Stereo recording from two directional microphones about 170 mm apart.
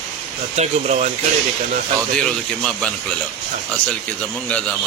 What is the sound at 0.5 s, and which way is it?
Speech, 40° right (ahead or behind).